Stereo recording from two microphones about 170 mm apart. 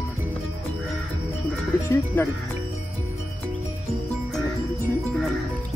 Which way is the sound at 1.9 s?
15° left (ahead or behind).